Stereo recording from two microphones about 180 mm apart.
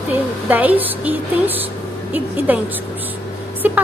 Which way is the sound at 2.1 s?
10° right (ahead or behind).